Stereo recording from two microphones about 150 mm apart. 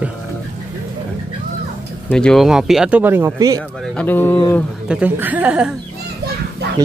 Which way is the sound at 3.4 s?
25° right (ahead or behind).